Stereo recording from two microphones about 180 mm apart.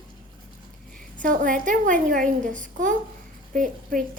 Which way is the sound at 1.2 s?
45° right (ahead or behind).